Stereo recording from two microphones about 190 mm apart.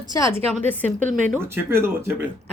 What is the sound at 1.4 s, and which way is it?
Speech, 10° right (ahead or behind).